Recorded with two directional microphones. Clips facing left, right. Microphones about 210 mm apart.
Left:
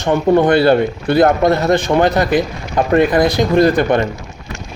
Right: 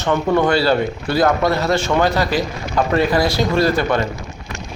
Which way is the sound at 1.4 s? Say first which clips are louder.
Left 4 dB; 20° left (ahead or behind).